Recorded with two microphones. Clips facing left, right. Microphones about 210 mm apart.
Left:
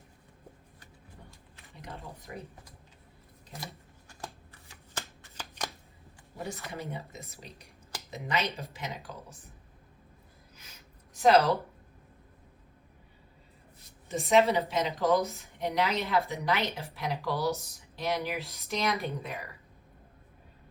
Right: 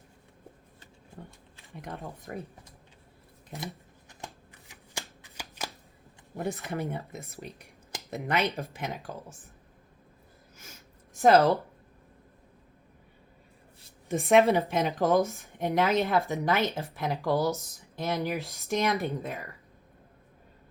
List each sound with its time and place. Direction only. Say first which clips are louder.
1.7 s a woman's voice: right 5 dB; 50° right (ahead or behind)
4.7 s shuffling cards: even; 15° right (ahead or behind)
6.7 s a woman's voice: right 5 dB; 50° right (ahead or behind)
10.6 s a sound: right 7 dB; 50° right (ahead or behind)
14.1 s a woman's voice: right 3 dB; 55° right (ahead or behind)